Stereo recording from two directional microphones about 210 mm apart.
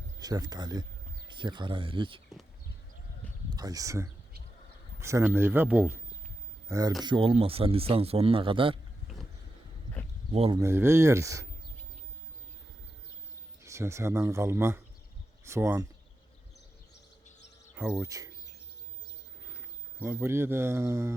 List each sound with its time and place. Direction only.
0.2 s a man's voice: 20° right (ahead or behind)
3.5 s a man's voice: 15° right (ahead or behind)
9.1 s a sound: centre (ahead or behind)
10.3 s a man's voice: 30° right (ahead or behind)
10.6 s speech: 10° right (ahead or behind)
13.7 s speech: 15° right (ahead or behind)
17.7 s speech: 10° right (ahead or behind)
20.0 s speech: 10° right (ahead or behind)